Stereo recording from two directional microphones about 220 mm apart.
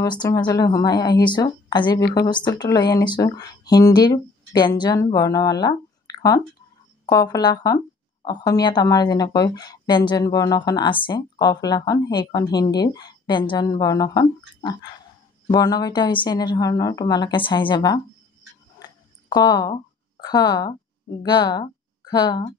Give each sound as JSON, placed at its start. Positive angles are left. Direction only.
{"t": 0.0, "sound": "a woman's voice", "side_deg": 20}
{"t": 18.8, "sound": "a sound", "side_deg": 20}
{"t": 21.2, "sound": "a woman's voice", "side_deg": 20}